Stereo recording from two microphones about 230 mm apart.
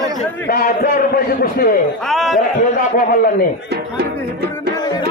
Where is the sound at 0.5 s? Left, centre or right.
Left.